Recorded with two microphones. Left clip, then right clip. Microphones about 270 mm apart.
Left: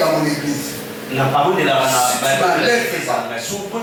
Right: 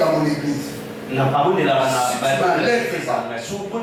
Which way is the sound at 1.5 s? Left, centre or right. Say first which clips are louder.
Left 2 dB; centre.